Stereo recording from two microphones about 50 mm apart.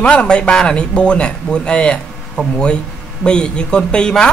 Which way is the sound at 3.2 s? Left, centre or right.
Centre.